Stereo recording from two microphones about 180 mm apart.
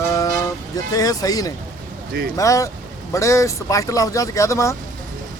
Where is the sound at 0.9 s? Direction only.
20° left (ahead or behind).